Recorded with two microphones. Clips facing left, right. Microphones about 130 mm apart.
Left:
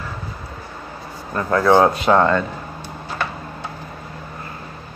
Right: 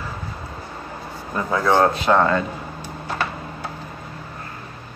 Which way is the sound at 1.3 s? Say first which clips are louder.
Left 4 dB; 5° right (ahead or behind).